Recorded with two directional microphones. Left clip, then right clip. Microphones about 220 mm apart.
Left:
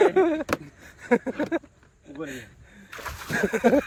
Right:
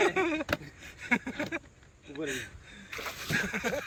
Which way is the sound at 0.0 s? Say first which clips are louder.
Left 8 dB; 25° left (ahead or behind).